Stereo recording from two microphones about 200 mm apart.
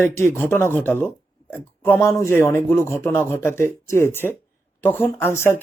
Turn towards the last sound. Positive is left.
turn(degrees=10)  # may be behind; listen again after turning